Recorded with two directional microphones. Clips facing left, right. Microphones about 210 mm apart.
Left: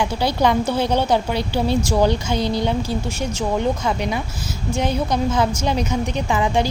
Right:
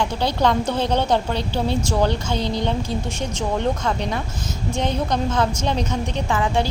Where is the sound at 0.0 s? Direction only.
10° left (ahead or behind).